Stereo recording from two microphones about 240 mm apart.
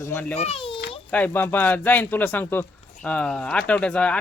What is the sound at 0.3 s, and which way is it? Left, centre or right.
Speech, left.